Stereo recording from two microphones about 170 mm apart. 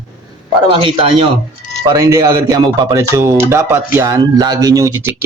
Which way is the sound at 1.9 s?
20° right (ahead or behind).